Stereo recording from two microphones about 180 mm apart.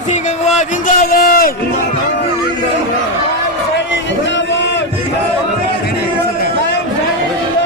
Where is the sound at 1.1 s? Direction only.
55° left (ahead or behind).